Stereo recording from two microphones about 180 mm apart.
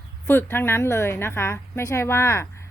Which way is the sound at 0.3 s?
10° left (ahead or behind).